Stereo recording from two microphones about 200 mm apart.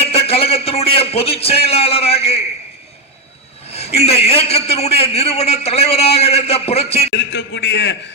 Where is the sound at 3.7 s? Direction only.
30° left (ahead or behind).